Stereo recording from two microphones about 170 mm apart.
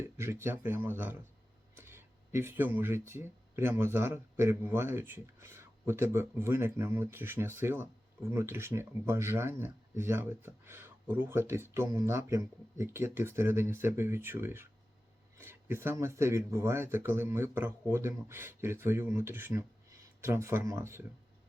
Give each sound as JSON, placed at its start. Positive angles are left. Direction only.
{"t": 0.0, "sound": "speech", "side_deg": -15}